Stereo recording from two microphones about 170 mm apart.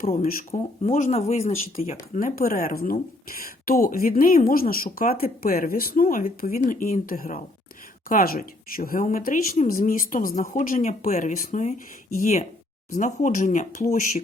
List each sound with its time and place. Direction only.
0.2 s speech: 55° left (ahead or behind)
0.6 s speech: 40° left (ahead or behind)
2.1 s speech: 55° left (ahead or behind)